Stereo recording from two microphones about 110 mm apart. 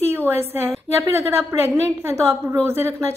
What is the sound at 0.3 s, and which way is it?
A woman's voice, 20° right (ahead or behind).